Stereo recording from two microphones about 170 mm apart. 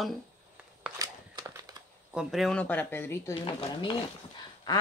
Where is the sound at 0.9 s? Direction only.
20° right (ahead or behind).